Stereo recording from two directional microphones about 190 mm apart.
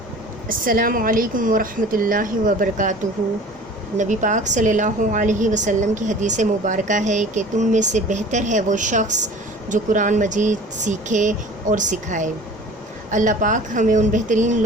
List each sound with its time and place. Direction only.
0.4 s speech: 45° right (ahead or behind)
3.9 s a woman's voice: 40° right (ahead or behind)